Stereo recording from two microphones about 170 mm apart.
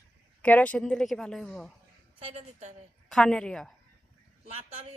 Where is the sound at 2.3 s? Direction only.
40° right (ahead or behind).